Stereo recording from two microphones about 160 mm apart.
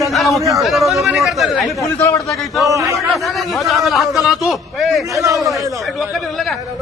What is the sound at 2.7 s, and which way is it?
Speech, 20° right (ahead or behind).